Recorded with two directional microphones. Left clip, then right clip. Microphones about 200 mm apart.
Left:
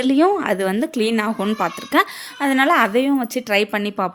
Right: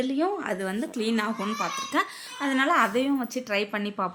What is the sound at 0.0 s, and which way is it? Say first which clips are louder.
Speech: left 10 dB; 55° left (ahead or behind).